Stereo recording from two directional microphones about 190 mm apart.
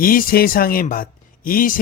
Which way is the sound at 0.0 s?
50° left (ahead or behind).